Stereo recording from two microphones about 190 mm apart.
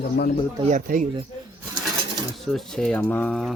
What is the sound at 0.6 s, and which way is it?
Speech, 40° right (ahead or behind).